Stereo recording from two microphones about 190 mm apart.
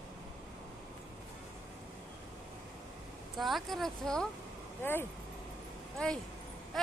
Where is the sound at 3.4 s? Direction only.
Centre (ahead or behind).